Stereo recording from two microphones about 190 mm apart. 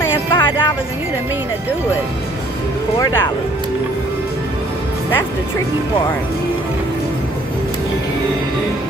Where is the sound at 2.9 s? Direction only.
20° left (ahead or behind).